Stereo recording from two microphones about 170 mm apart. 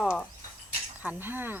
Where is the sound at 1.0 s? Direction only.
10° right (ahead or behind).